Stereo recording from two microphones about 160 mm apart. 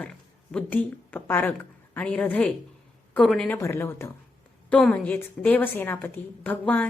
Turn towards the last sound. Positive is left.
turn(degrees=10)  # may be behind; listen again after turning